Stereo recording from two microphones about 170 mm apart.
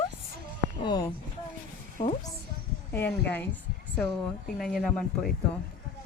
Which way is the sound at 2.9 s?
10° left (ahead or behind).